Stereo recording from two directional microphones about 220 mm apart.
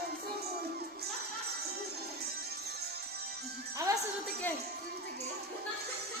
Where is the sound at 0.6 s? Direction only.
45° right (ahead or behind).